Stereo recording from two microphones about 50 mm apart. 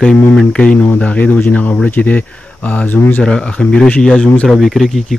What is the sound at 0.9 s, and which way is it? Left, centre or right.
Speech, left.